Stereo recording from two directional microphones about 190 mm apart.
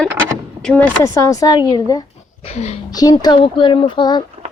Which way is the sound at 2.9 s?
20° left (ahead or behind).